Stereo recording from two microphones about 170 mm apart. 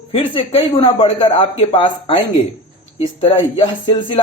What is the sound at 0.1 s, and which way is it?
A woman's voice, 35° left (ahead or behind).